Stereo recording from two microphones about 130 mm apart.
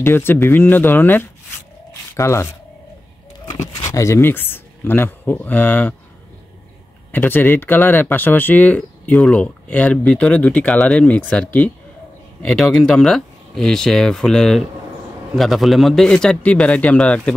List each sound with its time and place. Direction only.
0.0 s speech: 15° left (ahead or behind)
7.1 s speech: 15° left (ahead or behind)